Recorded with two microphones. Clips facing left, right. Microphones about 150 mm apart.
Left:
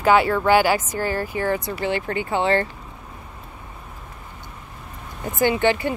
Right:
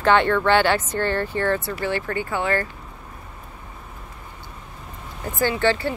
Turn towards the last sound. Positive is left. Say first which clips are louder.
# left 2 dB
turn(degrees=15)  # may be behind; listen again after turning